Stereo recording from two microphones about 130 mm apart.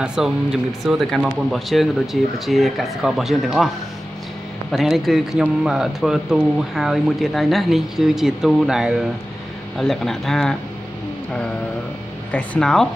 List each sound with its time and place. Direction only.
0.0 s speech: 5° right (ahead or behind)
4.7 s speech: centre (ahead or behind)
12.3 s speech: 5° left (ahead or behind)